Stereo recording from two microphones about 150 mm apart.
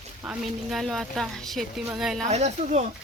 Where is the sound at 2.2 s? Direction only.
50° right (ahead or behind).